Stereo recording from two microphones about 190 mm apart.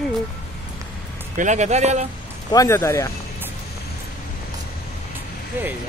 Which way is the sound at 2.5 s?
15° left (ahead or behind).